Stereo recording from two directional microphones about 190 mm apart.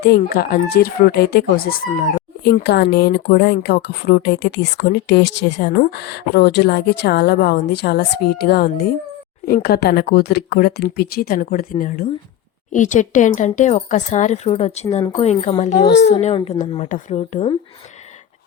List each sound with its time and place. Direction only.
0.0 s speech: 55° left (ahead or behind); by 17.6 s 35° left (ahead or behind)